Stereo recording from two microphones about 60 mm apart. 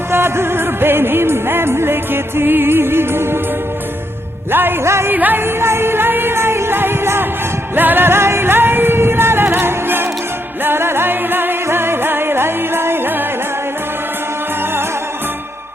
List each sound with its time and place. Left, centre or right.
0.1 s music: right
4.5 s music: right
5.1 s music: right
5.5 s music: right